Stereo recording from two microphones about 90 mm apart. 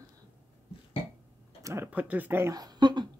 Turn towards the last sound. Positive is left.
turn(degrees=-50)  # may be behind; listen again after turning